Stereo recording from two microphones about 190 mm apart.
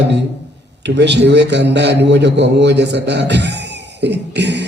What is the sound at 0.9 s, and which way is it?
A man's voice, 65° right (ahead or behind).